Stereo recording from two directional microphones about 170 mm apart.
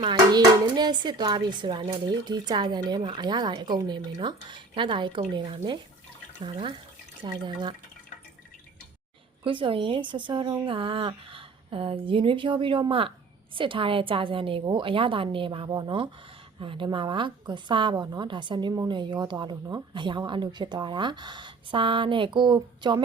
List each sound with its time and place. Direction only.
0.0 s a woman's voice: 25° right (ahead or behind)
9.4 s a woman's voice: 30° right (ahead or behind)